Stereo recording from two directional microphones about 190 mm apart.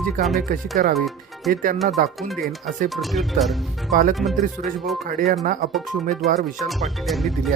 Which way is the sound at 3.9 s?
45° right (ahead or behind).